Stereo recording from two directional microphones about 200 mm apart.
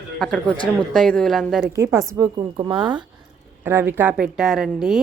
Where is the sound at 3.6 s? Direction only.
10° right (ahead or behind).